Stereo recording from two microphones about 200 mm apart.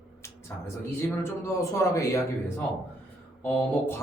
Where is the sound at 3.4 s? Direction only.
5° left (ahead or behind).